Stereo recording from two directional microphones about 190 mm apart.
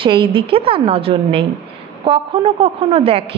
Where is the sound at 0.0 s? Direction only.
25° right (ahead or behind).